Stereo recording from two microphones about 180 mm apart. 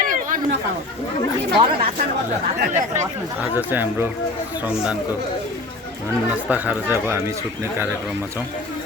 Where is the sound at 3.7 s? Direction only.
10° right (ahead or behind).